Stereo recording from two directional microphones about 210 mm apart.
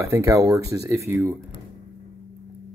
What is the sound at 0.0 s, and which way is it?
Speech, 15° right (ahead or behind).